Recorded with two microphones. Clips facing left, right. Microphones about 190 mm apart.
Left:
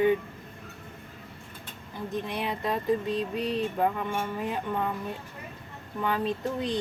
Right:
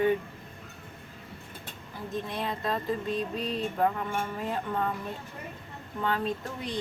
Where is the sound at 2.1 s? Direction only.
15° left (ahead or behind).